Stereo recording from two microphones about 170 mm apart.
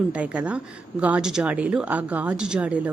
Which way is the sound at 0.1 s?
5° right (ahead or behind).